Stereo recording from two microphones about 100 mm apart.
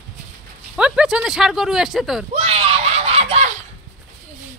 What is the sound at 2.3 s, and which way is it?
Screaming, 90° right.